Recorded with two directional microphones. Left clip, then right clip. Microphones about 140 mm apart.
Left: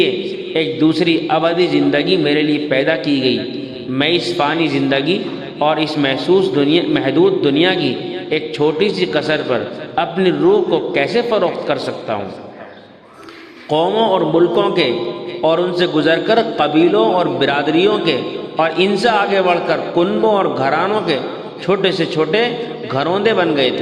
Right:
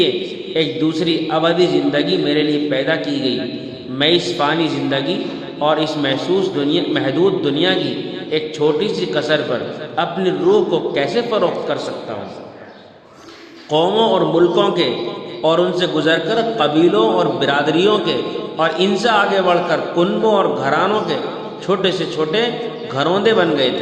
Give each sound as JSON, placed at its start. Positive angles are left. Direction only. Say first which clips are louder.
{"t": 0.5, "sound": "a man's voice", "louder": "left 3 dB", "side_deg": 40}
{"t": 13.7, "sound": "a man's voice", "louder": "even", "side_deg": 40}